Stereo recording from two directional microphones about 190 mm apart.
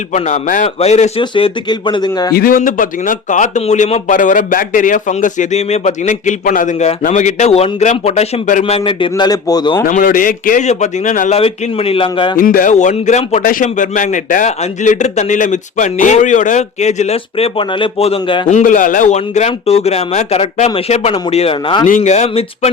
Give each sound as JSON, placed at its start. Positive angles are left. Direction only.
{"t": 0.1, "sound": "speech", "side_deg": 40}
{"t": 2.3, "sound": "speech", "side_deg": 50}
{"t": 8.9, "sound": "a man's voice", "side_deg": 25}
{"t": 9.8, "sound": "a man's voice", "side_deg": 45}
{"t": 11.3, "sound": "speech", "side_deg": 30}
{"t": 12.4, "sound": "speech", "side_deg": 45}
{"t": 18.4, "sound": "speech", "side_deg": 40}
{"t": 21.8, "sound": "speech", "side_deg": 40}